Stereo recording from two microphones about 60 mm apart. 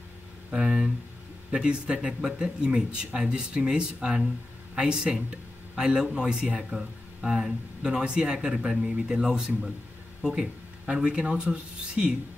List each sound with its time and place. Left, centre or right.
0.5 s speech: centre